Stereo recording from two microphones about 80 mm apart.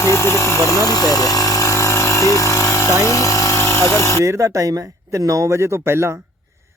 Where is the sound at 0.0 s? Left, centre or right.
Left.